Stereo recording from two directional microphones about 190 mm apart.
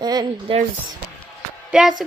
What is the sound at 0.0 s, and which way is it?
Speech, 20° right (ahead or behind).